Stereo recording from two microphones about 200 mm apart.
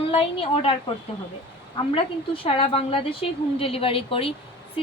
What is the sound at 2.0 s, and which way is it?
A woman's voice, 25° left (ahead or behind).